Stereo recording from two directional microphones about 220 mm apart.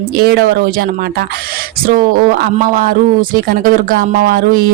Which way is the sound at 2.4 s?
40° right (ahead or behind).